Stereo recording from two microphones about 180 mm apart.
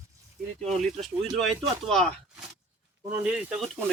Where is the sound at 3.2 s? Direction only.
5° right (ahead or behind).